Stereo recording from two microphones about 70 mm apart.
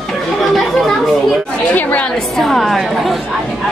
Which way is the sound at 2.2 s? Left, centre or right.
Centre.